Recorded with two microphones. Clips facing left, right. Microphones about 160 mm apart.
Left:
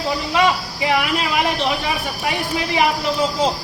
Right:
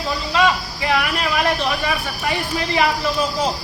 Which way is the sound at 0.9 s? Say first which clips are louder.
Left 1 dB; 15° left (ahead or behind).